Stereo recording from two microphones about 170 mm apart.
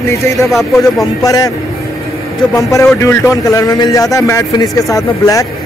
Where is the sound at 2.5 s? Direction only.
15° left (ahead or behind).